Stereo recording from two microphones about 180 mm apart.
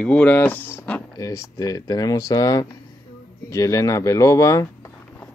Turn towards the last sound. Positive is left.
turn(degrees=20)  # may be behind; listen again after turning